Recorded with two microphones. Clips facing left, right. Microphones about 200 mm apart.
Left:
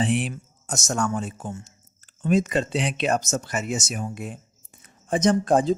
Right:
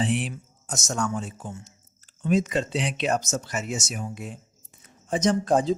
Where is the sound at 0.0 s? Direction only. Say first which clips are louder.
Left 2 dB; 55° left (ahead or behind).